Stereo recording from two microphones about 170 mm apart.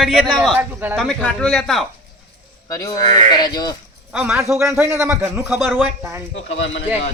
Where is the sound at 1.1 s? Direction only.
5° left (ahead or behind).